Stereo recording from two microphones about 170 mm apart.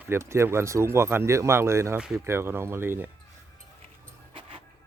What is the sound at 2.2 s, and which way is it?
Speech, 15° right (ahead or behind).